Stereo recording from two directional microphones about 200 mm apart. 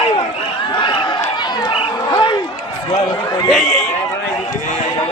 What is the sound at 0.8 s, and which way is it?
Run, 25° left (ahead or behind).